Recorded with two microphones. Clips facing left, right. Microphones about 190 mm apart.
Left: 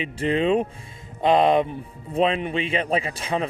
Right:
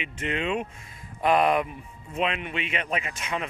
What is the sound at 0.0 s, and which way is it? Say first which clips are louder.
A man's voice: left 8 dB; 35° left (ahead or behind).